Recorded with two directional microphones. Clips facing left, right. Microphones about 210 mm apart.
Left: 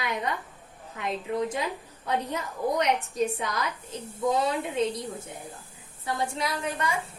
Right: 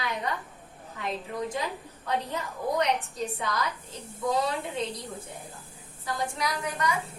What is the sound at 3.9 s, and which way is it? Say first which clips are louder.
Speech: left 6 dB; 20° left (ahead or behind).